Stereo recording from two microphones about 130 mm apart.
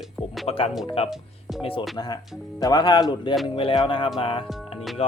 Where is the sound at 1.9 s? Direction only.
30° left (ahead or behind).